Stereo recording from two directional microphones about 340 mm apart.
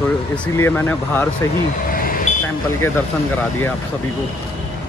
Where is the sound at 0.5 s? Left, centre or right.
Centre.